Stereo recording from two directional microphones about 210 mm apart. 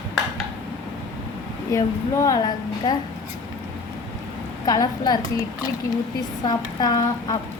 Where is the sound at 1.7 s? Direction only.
15° left (ahead or behind).